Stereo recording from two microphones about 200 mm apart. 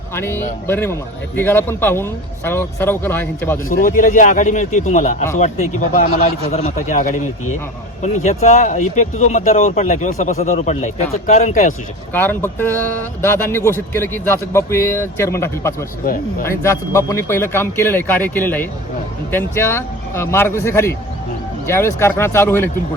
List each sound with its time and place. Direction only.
0.1 s a man's voice: 10° left (ahead or behind)
3.7 s speech: 45° left (ahead or behind)
12.1 s a man's voice: 10° left (ahead or behind)